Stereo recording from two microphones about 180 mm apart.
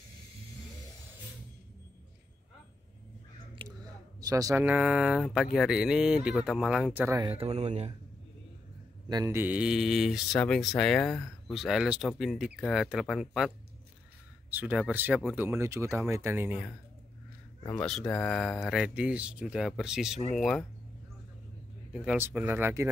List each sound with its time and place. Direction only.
3.6 s speech: 20° right (ahead or behind)
7.2 s speech: 35° right (ahead or behind)
9.1 s speech: 15° right (ahead or behind)
14.5 s speech: 10° right (ahead or behind)
17.6 s speech: 5° left (ahead or behind)
21.9 s speech: 10° right (ahead or behind)